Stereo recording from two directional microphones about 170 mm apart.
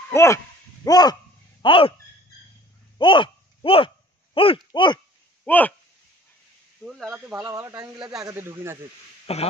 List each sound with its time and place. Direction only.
0.1 s speech: 15° left (ahead or behind)
0.8 s a sound: 25° left (ahead or behind)
1.6 s speech: 30° left (ahead or behind)
3.0 s a sound: 30° left (ahead or behind)
5.4 s speech: 10° left (ahead or behind)
6.8 s speech: 5° right (ahead or behind)
7.4 s speech: 20° right (ahead or behind)
9.2 s speech: 35° left (ahead or behind)